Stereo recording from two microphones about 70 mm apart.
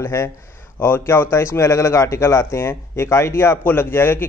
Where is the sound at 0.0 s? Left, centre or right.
Left.